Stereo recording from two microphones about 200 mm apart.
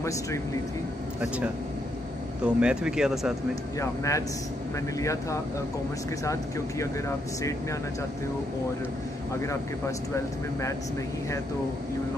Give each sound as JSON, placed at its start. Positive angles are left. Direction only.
{"t": 2.4, "sound": "speech", "side_deg": -5}
{"t": 3.8, "sound": "speech", "side_deg": 15}
{"t": 9.4, "sound": "speech", "side_deg": 15}